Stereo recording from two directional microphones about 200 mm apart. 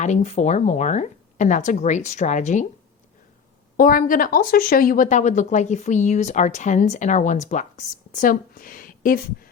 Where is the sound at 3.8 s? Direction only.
45° left (ahead or behind).